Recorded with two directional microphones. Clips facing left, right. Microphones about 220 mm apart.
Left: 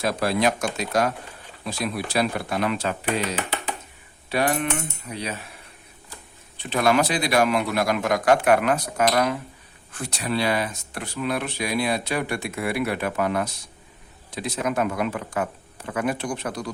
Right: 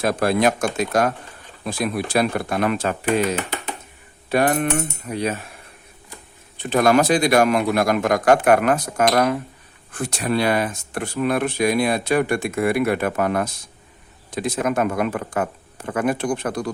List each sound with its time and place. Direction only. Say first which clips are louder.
0.0 s speech: right 4 dB; 50° right (ahead or behind)
6.6 s speech: right 4 dB; 45° right (ahead or behind)